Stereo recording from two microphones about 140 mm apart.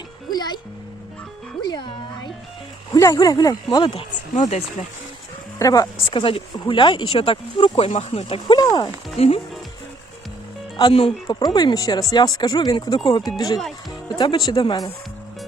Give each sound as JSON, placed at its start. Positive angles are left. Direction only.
{"t": 0.3, "sound": "speech", "side_deg": 30}
{"t": 1.6, "sound": "speech", "side_deg": 30}
{"t": 4.4, "sound": "speech", "side_deg": 55}
{"t": 5.5, "sound": "speech", "side_deg": 25}
{"t": 6.1, "sound": "speech", "side_deg": 40}
{"t": 9.1, "sound": "speech", "side_deg": 45}
{"t": 10.8, "sound": "speech", "side_deg": 40}
{"t": 11.3, "sound": "speech", "side_deg": 30}